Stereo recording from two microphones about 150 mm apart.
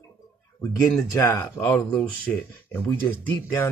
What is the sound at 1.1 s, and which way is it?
Speech, 20° left (ahead or behind).